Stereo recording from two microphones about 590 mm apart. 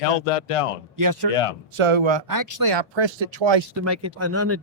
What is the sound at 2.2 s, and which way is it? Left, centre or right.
Speech, right.